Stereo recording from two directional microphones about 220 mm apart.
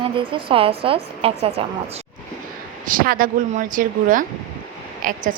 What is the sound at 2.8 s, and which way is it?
A woman's voice, 40° right (ahead or behind).